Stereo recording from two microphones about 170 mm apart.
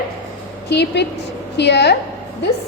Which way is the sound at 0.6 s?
85° left.